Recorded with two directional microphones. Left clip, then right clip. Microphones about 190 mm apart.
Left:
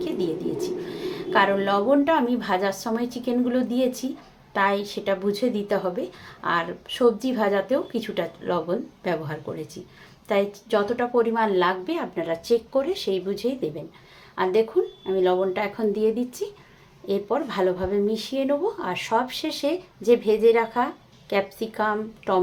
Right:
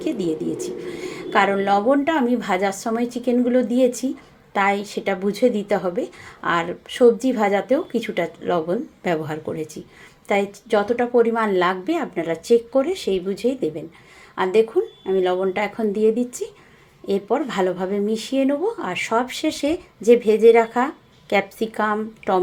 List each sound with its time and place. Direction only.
0.2 s speech: 20° right (ahead or behind)